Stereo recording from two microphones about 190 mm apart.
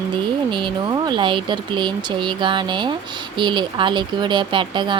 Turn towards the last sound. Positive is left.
turn(degrees=-25)  # may be behind; listen again after turning